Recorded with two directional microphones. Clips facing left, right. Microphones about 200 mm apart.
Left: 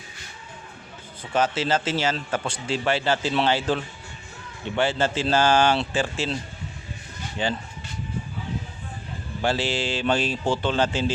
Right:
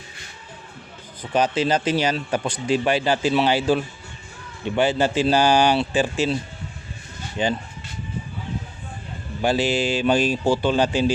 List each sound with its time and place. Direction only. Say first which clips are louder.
1.3 s speech: right 3 dB; 15° right (ahead or behind)
7.4 s speech: right 4 dB; 15° right (ahead or behind)
9.4 s speech: right 4 dB; 15° right (ahead or behind)